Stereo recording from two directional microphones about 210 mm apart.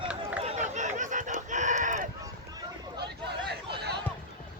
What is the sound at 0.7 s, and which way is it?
Chicken, 35° right (ahead or behind).